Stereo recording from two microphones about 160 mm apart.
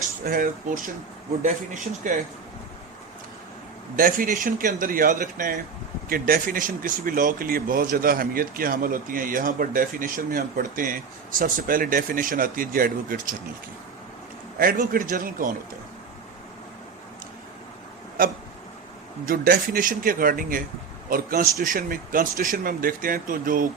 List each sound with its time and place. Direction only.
0.3 s speech: 60° right (ahead or behind)
3.9 s speech: 60° right (ahead or behind)
14.6 s speech: 60° right (ahead or behind)
18.2 s speech: 60° right (ahead or behind)